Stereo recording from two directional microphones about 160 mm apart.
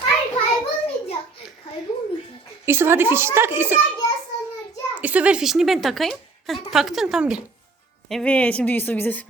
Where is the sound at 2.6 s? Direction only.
15° right (ahead or behind).